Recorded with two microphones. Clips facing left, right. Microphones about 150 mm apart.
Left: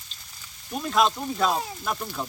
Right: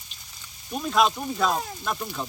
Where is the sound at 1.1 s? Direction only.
10° right (ahead or behind).